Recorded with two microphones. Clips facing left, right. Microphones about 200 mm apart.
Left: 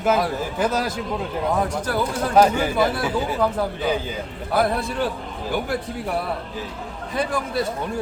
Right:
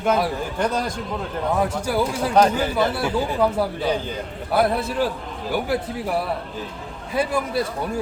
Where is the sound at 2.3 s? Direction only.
5° left (ahead or behind).